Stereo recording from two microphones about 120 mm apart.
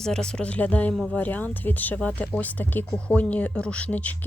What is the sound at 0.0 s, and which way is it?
Speech, 5° left (ahead or behind).